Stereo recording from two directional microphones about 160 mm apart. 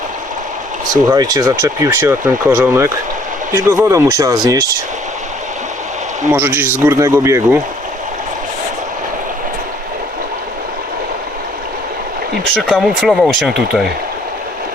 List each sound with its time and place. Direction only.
1.1 s speech: 25° right (ahead or behind)
6.3 s speech: 15° right (ahead or behind)
12.6 s speech: centre (ahead or behind)